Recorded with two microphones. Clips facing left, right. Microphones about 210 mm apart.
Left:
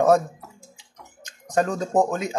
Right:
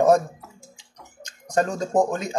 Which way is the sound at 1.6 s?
5° left (ahead or behind).